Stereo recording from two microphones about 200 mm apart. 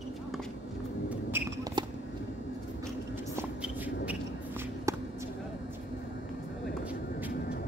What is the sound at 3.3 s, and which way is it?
Shuffle, 10° right (ahead or behind).